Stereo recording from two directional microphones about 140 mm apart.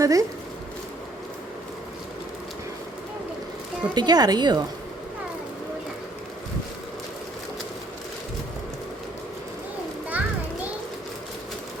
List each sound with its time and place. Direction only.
0.0 s speech: 25° right (ahead or behind)
3.9 s a woman's voice: 30° right (ahead or behind)
10.1 s music: 10° right (ahead or behind)